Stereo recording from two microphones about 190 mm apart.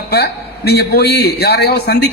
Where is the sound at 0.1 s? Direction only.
60° left (ahead or behind).